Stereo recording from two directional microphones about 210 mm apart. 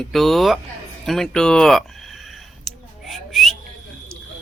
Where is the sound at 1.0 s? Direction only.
Centre (ahead or behind).